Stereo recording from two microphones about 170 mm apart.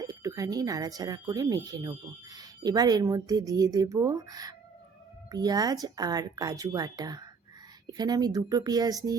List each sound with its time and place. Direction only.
0.0 s speech: 20° right (ahead or behind)